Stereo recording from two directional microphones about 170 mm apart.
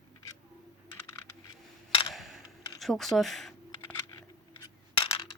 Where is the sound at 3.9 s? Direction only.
20° left (ahead or behind).